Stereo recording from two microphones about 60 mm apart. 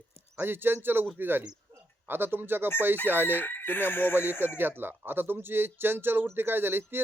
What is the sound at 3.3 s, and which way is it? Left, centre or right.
Speech, left.